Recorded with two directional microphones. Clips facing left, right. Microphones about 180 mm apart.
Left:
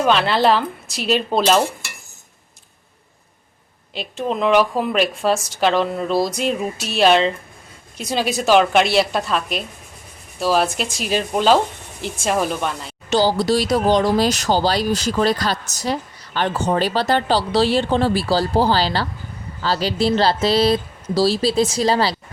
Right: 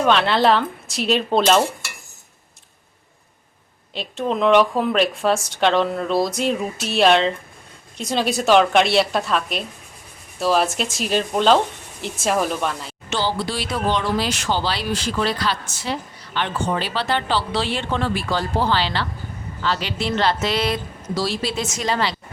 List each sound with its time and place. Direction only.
0.0 s speech: centre (ahead or behind)
3.9 s speech: centre (ahead or behind)
13.1 s speech: 40° left (ahead or behind)